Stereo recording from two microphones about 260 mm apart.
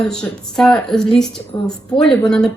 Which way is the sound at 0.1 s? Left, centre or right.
Centre.